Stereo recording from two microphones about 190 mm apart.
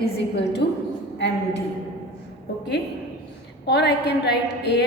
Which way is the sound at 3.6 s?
60° left (ahead or behind).